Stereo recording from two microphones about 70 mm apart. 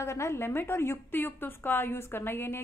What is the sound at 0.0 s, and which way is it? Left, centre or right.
A woman's voice, left.